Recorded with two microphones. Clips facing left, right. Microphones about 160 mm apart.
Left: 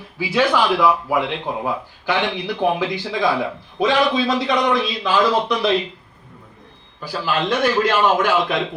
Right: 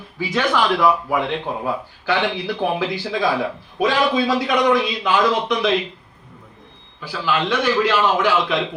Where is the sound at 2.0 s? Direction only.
15° left (ahead or behind).